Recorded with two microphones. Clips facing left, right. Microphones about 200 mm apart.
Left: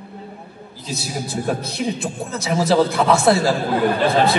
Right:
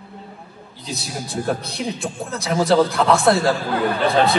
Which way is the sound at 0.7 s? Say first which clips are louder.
Left 2 dB; centre (ahead or behind).